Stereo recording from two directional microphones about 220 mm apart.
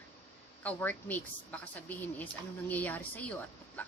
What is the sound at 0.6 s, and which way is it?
A woman's voice, 5° left (ahead or behind).